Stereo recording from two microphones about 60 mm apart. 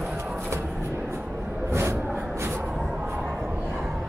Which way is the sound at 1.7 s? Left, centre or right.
Right.